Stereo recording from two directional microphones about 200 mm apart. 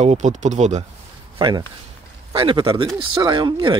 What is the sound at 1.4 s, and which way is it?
Speech, 25° right (ahead or behind).